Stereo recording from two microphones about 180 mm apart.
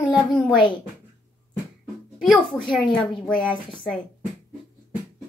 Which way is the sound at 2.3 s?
Centre (ahead or behind).